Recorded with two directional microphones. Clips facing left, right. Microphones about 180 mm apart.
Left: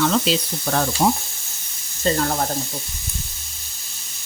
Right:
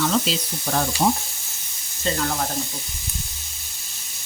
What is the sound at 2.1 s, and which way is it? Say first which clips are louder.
Speech: left 5 dB; 40° left (ahead or behind).